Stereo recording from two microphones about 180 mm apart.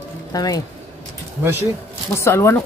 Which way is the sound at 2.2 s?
15° left (ahead or behind).